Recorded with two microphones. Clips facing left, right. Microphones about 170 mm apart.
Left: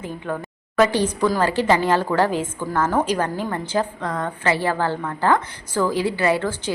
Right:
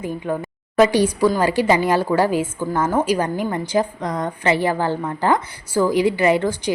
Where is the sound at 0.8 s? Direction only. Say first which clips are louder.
Right 3 dB; 15° right (ahead or behind).